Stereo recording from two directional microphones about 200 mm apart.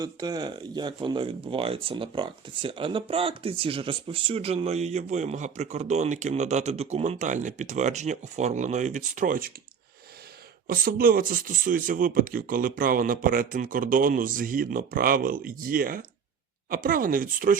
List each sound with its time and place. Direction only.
0.0 s speech: 20° right (ahead or behind); by 9.5 s 40° right (ahead or behind)
10.7 s speech: 45° right (ahead or behind)